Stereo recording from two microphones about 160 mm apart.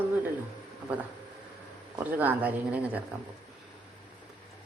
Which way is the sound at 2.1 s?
10° right (ahead or behind).